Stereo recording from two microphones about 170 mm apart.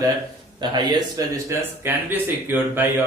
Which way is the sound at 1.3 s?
15° right (ahead or behind).